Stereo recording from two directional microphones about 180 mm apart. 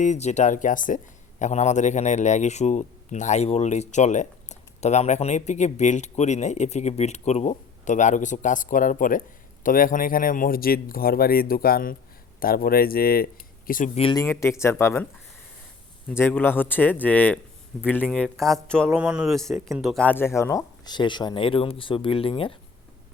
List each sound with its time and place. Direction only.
0.0 s speech: 40° left (ahead or behind)
14.0 s speech: 25° left (ahead or behind)
16.0 s speech: 10° left (ahead or behind); by 22.5 s 30° left (ahead or behind)